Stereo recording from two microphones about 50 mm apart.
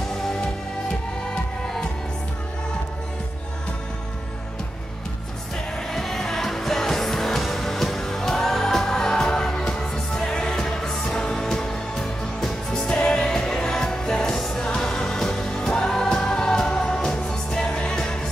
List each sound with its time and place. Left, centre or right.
5.9 s music: centre